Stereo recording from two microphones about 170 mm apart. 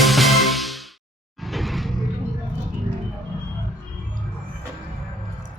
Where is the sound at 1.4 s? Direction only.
Centre (ahead or behind).